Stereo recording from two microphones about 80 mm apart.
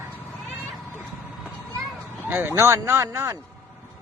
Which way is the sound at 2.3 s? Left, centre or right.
Right.